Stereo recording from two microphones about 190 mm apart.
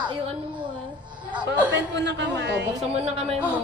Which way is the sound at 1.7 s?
70° right (ahead or behind).